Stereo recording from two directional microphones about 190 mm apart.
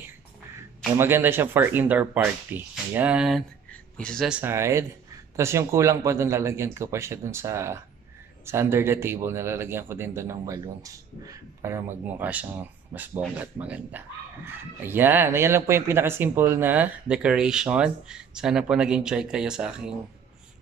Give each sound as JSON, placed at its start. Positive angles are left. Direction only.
{"t": 0.9, "sound": "a man's voice", "side_deg": -10}
{"t": 4.4, "sound": "a man's voice", "side_deg": -15}